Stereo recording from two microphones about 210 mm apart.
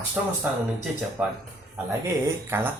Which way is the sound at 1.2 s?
5° right (ahead or behind).